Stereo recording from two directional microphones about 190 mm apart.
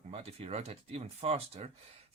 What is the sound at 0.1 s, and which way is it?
Speech, 30° right (ahead or behind).